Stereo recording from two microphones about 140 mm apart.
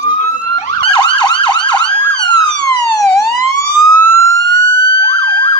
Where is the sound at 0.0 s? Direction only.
60° left (ahead or behind).